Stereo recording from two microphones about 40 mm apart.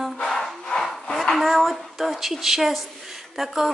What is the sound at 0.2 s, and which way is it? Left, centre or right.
Music, centre.